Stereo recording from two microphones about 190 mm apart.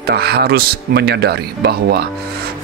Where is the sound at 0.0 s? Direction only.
55° right (ahead or behind).